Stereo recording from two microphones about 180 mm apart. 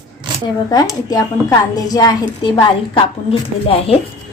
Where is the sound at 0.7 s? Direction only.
20° left (ahead or behind).